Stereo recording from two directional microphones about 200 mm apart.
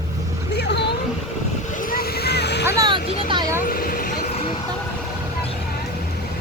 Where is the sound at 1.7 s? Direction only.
40° left (ahead or behind).